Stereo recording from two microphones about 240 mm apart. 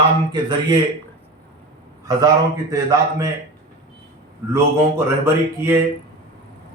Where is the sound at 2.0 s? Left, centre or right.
Centre.